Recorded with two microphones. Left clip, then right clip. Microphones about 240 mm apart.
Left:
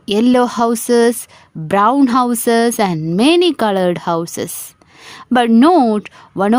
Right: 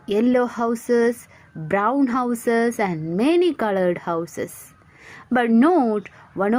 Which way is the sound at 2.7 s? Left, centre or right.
Left.